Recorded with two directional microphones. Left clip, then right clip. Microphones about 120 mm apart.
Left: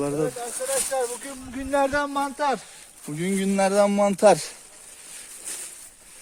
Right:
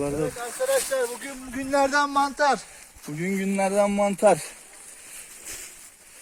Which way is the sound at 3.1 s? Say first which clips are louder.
Left 2 dB; 30° left (ahead or behind).